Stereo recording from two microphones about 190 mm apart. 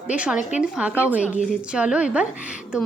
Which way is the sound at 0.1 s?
5° right (ahead or behind).